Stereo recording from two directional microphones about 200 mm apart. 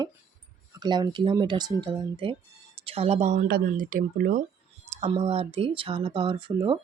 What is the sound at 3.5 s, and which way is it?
Speech, 45° right (ahead or behind).